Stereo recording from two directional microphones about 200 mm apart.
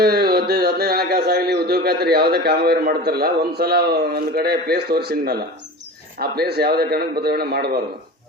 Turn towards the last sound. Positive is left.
turn(degrees=-50)  # may be behind; listen again after turning